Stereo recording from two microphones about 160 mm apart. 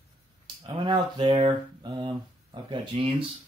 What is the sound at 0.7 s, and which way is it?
Speech, 30° right (ahead or behind).